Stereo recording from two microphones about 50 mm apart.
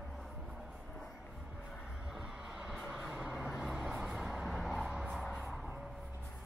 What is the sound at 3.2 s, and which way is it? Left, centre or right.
Vehicle, centre.